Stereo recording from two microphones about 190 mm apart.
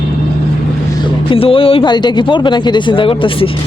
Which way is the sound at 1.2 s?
30° left (ahead or behind).